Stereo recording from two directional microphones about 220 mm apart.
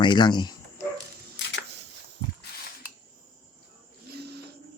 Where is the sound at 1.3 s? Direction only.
55° left (ahead or behind).